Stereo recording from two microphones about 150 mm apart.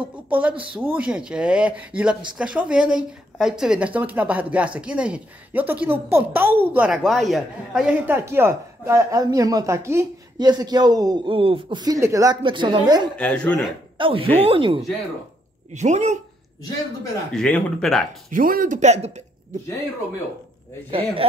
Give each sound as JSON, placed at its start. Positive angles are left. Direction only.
{"t": 0.1, "sound": "speech", "side_deg": -10}
{"t": 8.1, "sound": "speech", "side_deg": -15}
{"t": 12.4, "sound": "speech", "side_deg": -30}
{"t": 13.1, "sound": "speech", "side_deg": 10}
{"t": 13.9, "sound": "speech", "side_deg": -35}
{"t": 15.7, "sound": "speech", "side_deg": -50}
{"t": 17.3, "sound": "speech", "side_deg": 5}
{"t": 18.3, "sound": "a man's voice", "side_deg": -65}
{"t": 20.9, "sound": "speech", "side_deg": -35}